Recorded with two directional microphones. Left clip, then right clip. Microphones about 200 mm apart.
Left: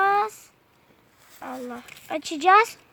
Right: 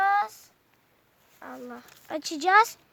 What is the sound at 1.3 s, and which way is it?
Speech, 20° right (ahead or behind).